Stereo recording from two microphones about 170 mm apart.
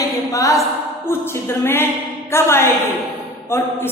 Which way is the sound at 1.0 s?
15° left (ahead or behind).